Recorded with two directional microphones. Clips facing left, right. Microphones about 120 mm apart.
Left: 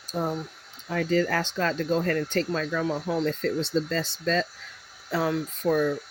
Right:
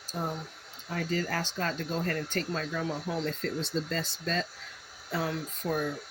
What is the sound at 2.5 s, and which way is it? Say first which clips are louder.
Speech: left 6 dB; 90° left.